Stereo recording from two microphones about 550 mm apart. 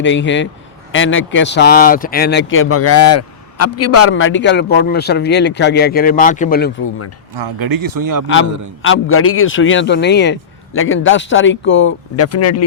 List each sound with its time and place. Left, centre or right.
0.0 s speech: centre
7.3 s speech: right
8.8 s speech: left